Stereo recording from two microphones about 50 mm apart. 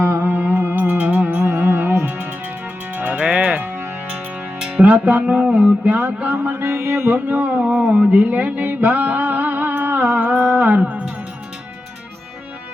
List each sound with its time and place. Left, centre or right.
0.2 s music: right
1.5 s music: right
2.9 s music: right
4.9 s a sound: right
6.7 s music: right
7.1 s a sound: right
7.6 s music: right
10.8 s music: right